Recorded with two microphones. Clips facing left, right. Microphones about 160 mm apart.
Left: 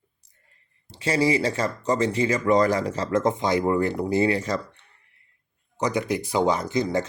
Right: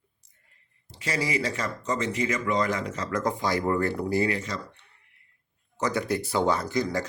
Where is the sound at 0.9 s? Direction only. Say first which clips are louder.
Left 8 dB; 30° left (ahead or behind).